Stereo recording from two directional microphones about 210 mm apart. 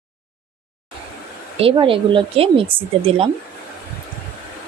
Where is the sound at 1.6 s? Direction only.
25° right (ahead or behind).